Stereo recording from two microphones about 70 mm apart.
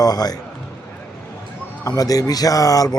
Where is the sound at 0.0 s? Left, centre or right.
Left.